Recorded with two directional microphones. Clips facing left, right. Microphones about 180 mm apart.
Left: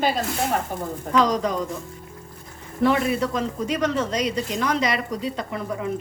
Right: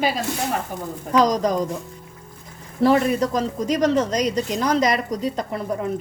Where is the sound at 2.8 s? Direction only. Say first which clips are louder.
Right 3 dB; 35° right (ahead or behind).